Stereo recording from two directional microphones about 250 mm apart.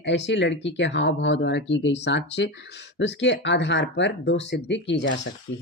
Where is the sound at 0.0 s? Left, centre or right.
Left.